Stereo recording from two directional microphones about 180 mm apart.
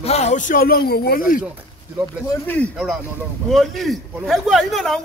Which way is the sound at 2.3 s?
10° left (ahead or behind).